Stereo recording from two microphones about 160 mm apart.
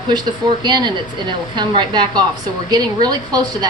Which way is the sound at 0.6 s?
25° right (ahead or behind).